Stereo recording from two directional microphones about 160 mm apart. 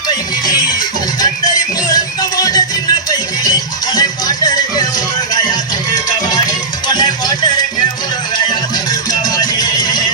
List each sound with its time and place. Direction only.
0.4 s music: 25° left (ahead or behind)
6.8 s music: 25° left (ahead or behind)
9.3 s music: 25° left (ahead or behind)